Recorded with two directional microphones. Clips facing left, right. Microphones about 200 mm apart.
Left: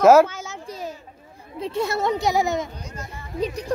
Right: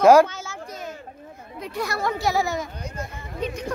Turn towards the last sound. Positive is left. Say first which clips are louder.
# left 3 dB
turn(degrees=35)  # may be behind; listen again after turning